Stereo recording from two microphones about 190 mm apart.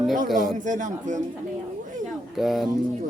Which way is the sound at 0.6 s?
40° right (ahead or behind).